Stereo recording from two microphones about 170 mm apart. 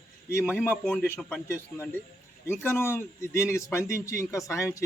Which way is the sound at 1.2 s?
10° left (ahead or behind).